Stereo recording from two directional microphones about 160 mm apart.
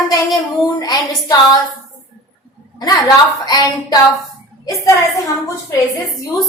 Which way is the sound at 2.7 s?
25° left (ahead or behind).